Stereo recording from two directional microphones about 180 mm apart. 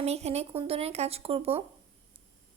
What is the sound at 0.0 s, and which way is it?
A woman's voice, 35° right (ahead or behind).